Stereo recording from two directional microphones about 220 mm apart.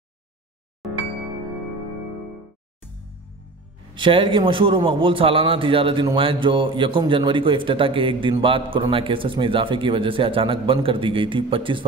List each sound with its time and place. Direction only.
0.8 s music: centre (ahead or behind)
3.9 s a man's voice: 20° right (ahead or behind)